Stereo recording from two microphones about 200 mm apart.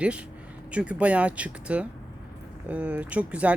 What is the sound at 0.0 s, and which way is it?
Speech, 5° right (ahead or behind).